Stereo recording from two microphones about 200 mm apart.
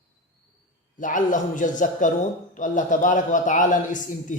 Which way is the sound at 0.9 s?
40° left (ahead or behind).